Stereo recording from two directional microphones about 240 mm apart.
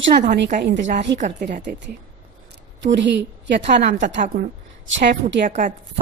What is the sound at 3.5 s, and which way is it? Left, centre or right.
A woman's voice, right.